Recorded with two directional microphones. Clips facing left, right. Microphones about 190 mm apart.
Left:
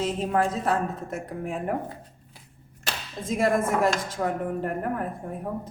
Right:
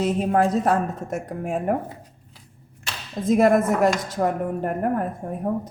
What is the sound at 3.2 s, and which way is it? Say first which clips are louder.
A woman's voice: right 6 dB; 40° right (ahead or behind).